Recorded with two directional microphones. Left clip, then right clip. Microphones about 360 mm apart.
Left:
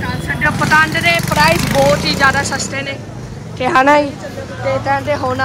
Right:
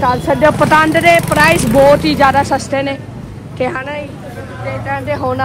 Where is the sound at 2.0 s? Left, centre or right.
Centre.